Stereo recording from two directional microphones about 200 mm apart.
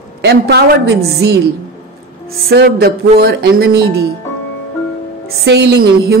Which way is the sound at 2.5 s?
50° right (ahead or behind).